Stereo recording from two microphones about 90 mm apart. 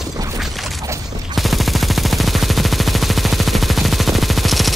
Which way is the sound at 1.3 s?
Centre (ahead or behind).